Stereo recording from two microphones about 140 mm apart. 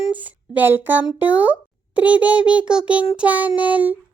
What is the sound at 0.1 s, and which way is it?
A child's voice, 10° right (ahead or behind).